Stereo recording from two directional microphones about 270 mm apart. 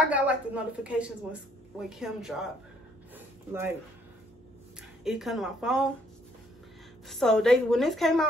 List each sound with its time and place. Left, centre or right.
0.1 s a woman's voice: centre
3.2 s a sound: centre
5.0 s a woman's voice: centre
7.1 s a woman's voice: centre